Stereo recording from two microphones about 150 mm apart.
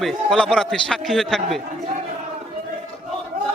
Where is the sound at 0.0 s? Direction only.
Centre (ahead or behind).